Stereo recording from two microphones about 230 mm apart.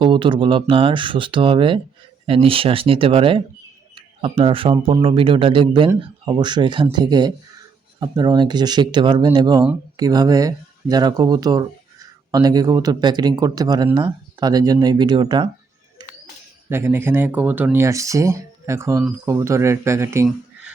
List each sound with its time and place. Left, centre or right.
0.0 s speech: right
16.6 s speech: centre